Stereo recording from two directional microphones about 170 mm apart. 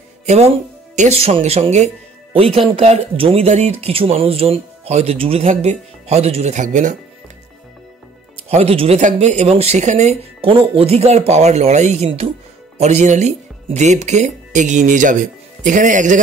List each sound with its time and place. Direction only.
0.3 s speech: 40° right (ahead or behind)
8.5 s speech: 35° right (ahead or behind)